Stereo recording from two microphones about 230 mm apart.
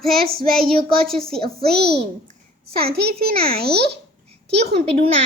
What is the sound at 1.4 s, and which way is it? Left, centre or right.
A child's voice, right.